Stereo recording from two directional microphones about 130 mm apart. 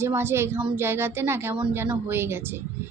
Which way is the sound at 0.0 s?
20° right (ahead or behind).